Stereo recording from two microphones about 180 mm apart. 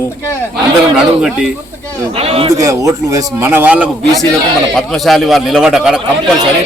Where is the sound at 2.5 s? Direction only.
20° right (ahead or behind).